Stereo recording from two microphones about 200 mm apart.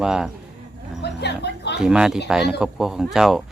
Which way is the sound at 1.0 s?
55° left (ahead or behind).